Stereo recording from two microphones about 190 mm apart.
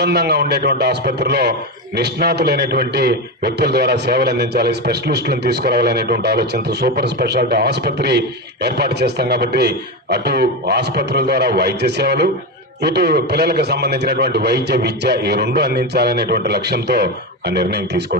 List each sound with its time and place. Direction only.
0.0 s a man's voice: 60° right (ahead or behind)